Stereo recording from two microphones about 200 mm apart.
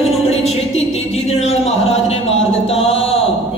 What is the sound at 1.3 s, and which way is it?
Music, 30° left (ahead or behind).